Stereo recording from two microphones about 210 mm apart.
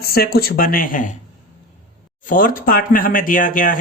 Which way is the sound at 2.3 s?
40° left (ahead or behind).